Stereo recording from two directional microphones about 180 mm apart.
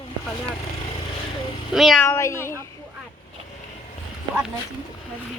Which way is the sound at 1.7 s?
Centre (ahead or behind).